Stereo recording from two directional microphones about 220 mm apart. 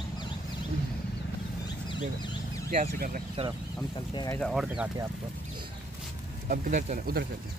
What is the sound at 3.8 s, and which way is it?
Speech, 15° left (ahead or behind).